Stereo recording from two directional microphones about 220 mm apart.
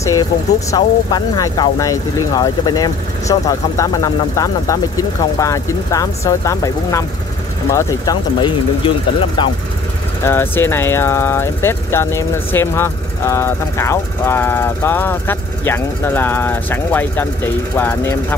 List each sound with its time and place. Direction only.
0.7 s speech: 15° left (ahead or behind)
10.2 s speech: 10° left (ahead or behind)